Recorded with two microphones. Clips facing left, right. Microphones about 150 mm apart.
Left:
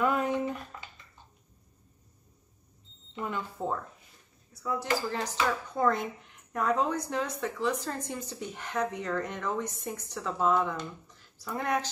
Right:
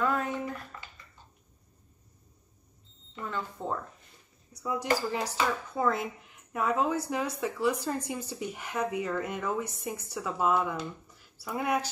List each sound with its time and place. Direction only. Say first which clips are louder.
0.0 s a sound: left 2 dB; 15° left (ahead or behind)
3.2 s speech: left 1 dB; 15° left (ahead or behind)
4.5 s speech: right 1 dB; 15° right (ahead or behind)